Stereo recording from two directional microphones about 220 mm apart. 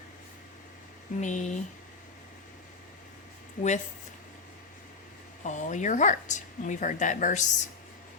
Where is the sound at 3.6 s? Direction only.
35° left (ahead or behind).